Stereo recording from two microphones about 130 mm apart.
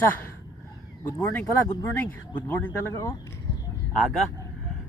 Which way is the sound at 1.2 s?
15° left (ahead or behind).